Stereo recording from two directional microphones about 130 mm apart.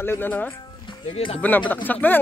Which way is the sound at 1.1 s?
45° left (ahead or behind).